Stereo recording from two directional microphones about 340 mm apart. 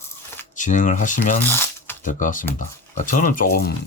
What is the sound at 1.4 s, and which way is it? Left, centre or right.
Coin, centre.